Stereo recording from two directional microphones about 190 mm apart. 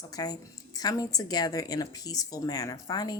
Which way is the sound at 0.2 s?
20° left (ahead or behind).